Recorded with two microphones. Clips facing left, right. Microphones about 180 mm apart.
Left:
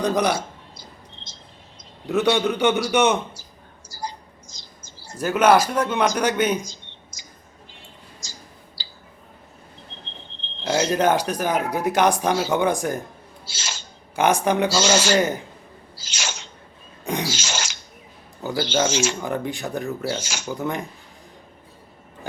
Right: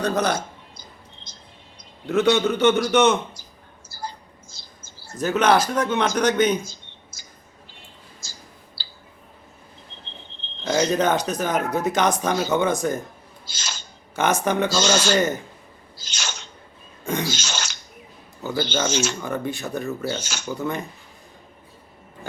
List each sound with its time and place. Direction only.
0.0 s speech: 15° left (ahead or behind)
0.8 s a sound: 25° left (ahead or behind)
2.0 s speech: 15° left (ahead or behind)
3.8 s mouse: 15° left (ahead or behind)
5.0 s speech: 10° left (ahead or behind)
6.7 s a sound: 15° left (ahead or behind)
10.6 s speech: 10° left (ahead or behind)
17.1 s beatboxing: 10° left (ahead or behind)
18.4 s speech: 10° left (ahead or behind)